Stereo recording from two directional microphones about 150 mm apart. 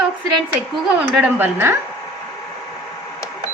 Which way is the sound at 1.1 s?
10° right (ahead or behind).